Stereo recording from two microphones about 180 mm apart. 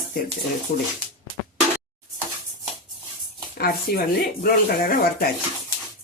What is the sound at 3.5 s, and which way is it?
Speech, 60° left (ahead or behind).